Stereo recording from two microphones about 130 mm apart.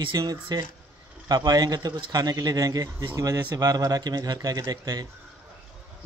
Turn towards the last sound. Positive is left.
turn(degrees=-30)  # may be behind; listen again after turning